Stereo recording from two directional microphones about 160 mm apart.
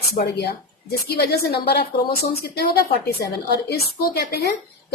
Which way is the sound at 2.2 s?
75° left (ahead or behind).